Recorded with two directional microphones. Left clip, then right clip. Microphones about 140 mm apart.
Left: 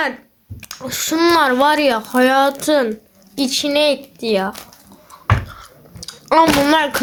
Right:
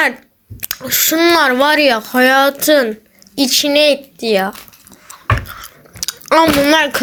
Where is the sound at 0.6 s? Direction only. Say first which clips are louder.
Right 7 dB; 10° right (ahead or behind).